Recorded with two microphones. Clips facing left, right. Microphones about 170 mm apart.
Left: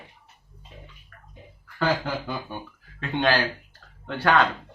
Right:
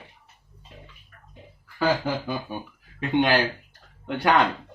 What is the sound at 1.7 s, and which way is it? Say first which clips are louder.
Speech: right 2 dB; 10° right (ahead or behind).